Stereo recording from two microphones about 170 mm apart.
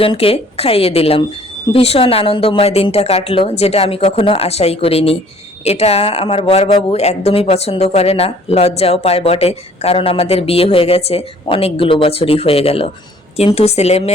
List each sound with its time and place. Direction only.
0.0 s speech: 30° left (ahead or behind)